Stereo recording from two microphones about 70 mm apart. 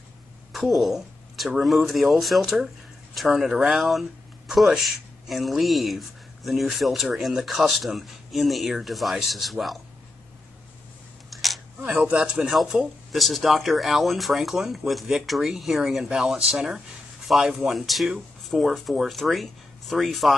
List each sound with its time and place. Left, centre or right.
0.5 s speech: centre
11.2 s camera: centre
11.8 s speech: right
13.1 s speech: centre